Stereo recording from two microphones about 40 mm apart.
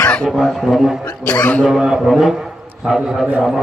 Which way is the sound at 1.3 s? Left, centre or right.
Left.